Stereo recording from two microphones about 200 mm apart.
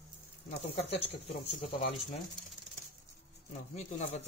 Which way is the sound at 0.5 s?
30° left (ahead or behind).